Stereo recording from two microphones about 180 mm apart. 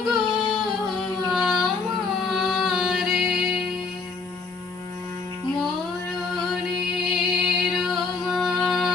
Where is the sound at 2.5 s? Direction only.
Centre (ahead or behind).